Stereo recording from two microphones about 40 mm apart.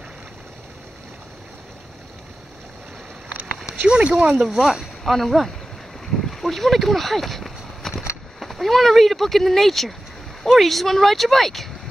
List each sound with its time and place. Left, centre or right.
3.8 s speech: right
4.4 s speech: centre
5.0 s speech: centre
6.0 s boat: centre
8.4 s speech: centre